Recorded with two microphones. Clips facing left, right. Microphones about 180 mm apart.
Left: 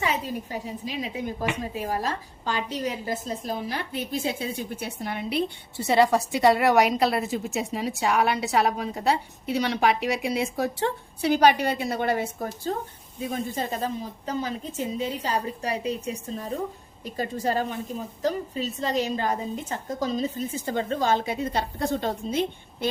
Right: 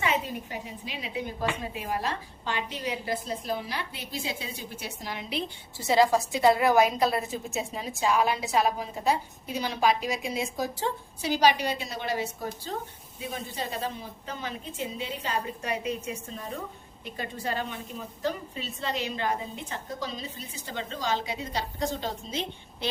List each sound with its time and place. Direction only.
0.0 s a woman's voice: 40° left (ahead or behind); by 22.9 s 55° left (ahead or behind)